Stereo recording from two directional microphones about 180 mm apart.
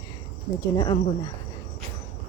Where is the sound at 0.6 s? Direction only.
25° left (ahead or behind).